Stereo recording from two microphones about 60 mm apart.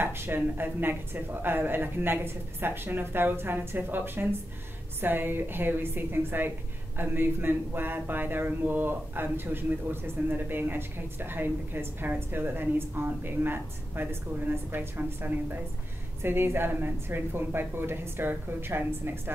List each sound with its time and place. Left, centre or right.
0.0 s speech: right